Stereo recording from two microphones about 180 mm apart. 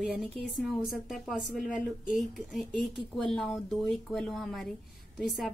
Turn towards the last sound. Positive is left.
turn(degrees=0)  # may be behind; listen again after turning